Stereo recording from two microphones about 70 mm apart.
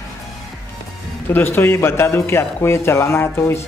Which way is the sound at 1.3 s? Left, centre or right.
Left.